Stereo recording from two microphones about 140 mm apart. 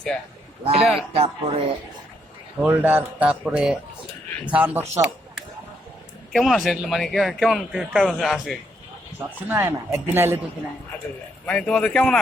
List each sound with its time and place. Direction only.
0.6 s speech: 45° right (ahead or behind)
2.6 s a man's voice: 10° right (ahead or behind)
6.3 s a man's voice: centre (ahead or behind)
9.1 s speech: 15° right (ahead or behind)
11.4 s a man's voice: 10° left (ahead or behind)